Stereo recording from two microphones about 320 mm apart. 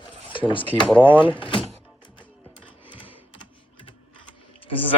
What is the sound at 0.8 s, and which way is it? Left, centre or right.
Speech, centre.